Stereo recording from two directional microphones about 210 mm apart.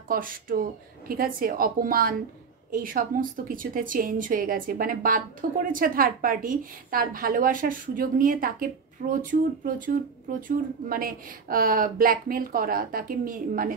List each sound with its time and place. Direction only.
0.1 s speech: 40° right (ahead or behind)